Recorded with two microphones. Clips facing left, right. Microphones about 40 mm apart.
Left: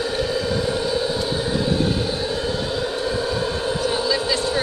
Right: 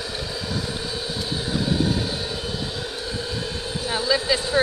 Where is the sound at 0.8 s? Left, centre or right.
Centre.